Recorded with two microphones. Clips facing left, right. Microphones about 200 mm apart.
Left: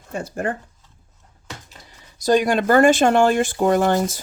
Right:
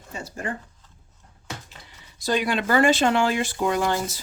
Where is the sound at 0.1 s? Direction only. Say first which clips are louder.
Left 7 dB; 55° left (ahead or behind).